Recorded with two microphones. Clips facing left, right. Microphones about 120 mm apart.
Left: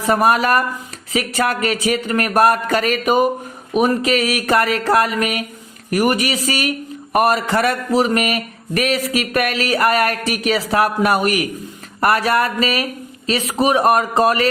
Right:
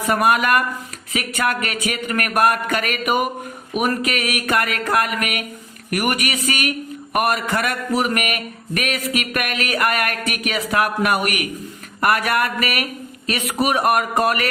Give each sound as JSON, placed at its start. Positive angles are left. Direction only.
{"t": 0.1, "sound": "a man's voice", "side_deg": 30}